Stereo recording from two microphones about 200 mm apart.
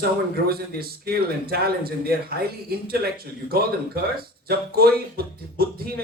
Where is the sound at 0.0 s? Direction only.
50° right (ahead or behind).